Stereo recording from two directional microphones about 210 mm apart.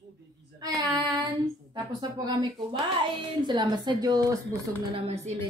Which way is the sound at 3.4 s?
20° right (ahead or behind).